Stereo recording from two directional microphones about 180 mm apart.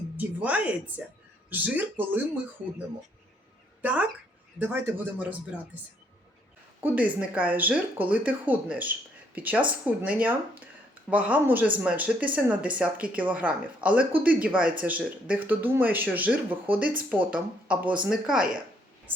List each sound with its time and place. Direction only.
0.2 s speech: 10° right (ahead or behind)
3.8 s speech: 10° right (ahead or behind)
6.8 s speech: 10° right (ahead or behind)
16.8 s speech: 50° right (ahead or behind)
17.1 s speech: 10° right (ahead or behind)